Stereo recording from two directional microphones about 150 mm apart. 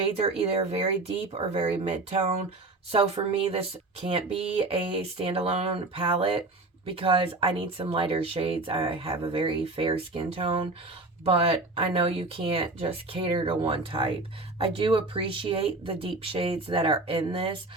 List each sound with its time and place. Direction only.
0.0 s speech: 40° right (ahead or behind)